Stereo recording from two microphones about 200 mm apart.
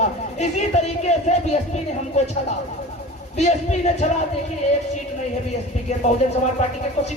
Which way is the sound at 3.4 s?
35° left (ahead or behind).